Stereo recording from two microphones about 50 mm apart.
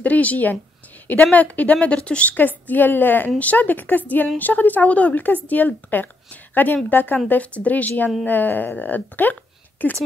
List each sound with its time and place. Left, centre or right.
0.0 s speech: left
2.3 s a woman's voice: left